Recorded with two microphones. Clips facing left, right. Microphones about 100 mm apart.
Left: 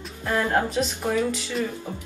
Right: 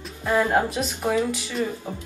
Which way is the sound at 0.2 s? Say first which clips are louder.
Right 2 dB; 10° right (ahead or behind).